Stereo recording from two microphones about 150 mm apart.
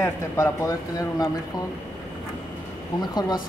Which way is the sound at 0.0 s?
20° left (ahead or behind).